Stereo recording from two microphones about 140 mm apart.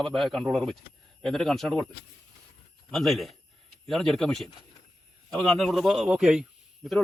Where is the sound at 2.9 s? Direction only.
Centre (ahead or behind).